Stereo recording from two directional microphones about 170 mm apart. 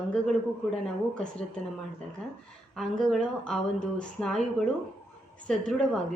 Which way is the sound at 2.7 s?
5° left (ahead or behind).